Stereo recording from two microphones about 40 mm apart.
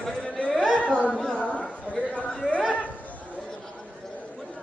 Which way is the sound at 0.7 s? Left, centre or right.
Left.